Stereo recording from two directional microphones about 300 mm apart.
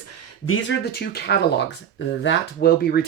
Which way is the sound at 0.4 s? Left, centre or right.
Left.